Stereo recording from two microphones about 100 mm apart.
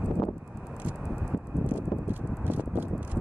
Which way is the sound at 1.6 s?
20° right (ahead or behind).